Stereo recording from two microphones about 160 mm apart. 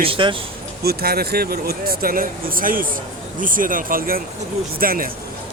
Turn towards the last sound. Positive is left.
turn(degrees=-65)  # may be behind; listen again after turning